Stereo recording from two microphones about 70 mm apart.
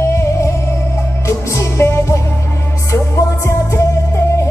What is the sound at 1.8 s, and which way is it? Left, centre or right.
Music, left.